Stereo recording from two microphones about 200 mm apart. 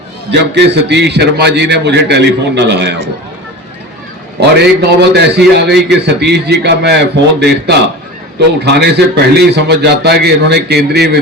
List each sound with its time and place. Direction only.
0.3 s a man's voice: 60° right (ahead or behind)
4.4 s a man's voice: 55° right (ahead or behind)